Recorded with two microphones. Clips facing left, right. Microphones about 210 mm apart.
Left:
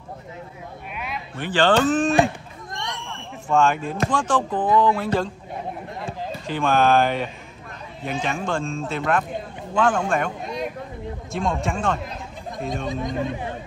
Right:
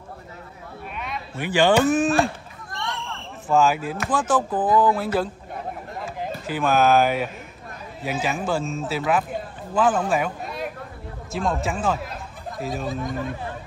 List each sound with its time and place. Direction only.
0.9 s a sound: 5° left (ahead or behind)
1.3 s speech: 10° right (ahead or behind)
2.7 s a sound: 15° left (ahead or behind)
3.4 s speech: 5° right (ahead or behind)
6.4 s speech: 5° right (ahead or behind)
13.0 s speech: 20° left (ahead or behind)